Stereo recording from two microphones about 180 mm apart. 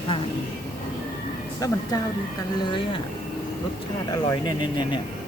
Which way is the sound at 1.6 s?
20° left (ahead or behind).